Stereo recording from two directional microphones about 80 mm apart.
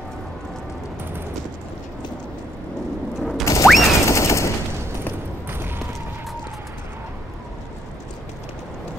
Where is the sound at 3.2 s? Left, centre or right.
Centre.